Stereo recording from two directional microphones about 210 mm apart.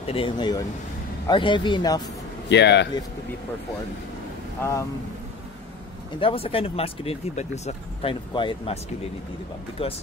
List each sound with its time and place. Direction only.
0.0 s speech: 25° left (ahead or behind)
2.5 s speech: 55° left (ahead or behind)
4.6 s speech: 10° left (ahead or behind)
6.1 s speech: 25° left (ahead or behind)
9.8 s speech: 25° left (ahead or behind)